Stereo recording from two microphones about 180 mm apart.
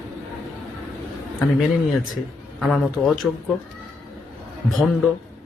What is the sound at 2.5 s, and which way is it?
Speech, centre (ahead or behind).